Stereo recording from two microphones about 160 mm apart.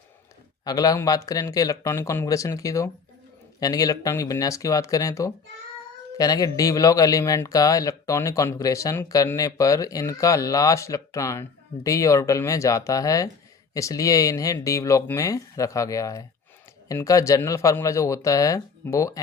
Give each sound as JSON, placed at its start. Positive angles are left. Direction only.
{"t": 0.6, "sound": "speech", "side_deg": 25}